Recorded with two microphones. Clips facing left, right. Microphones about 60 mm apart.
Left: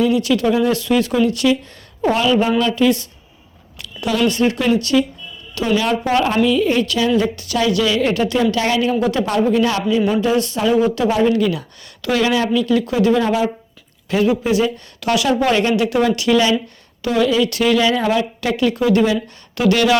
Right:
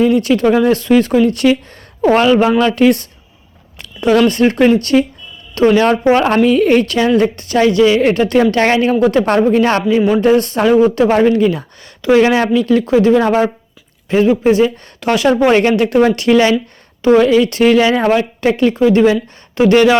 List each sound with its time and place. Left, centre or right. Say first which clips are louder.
0.0 s speech: right 4 dB; right
4.1 s speech: right 6 dB; right
11.3 s speech: right 4 dB; right
12.3 s speech: right 4 dB; right
13.2 s speech: right 5 dB; right
14.1 s speech: right 5 dB; right